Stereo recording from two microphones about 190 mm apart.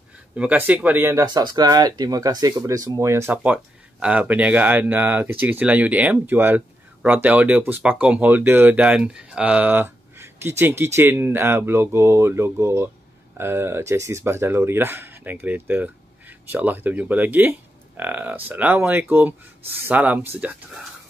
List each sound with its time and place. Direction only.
0.4 s speech: 5° right (ahead or behind)